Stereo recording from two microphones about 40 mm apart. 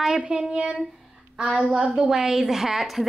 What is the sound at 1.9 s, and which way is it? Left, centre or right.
A woman's voice, centre.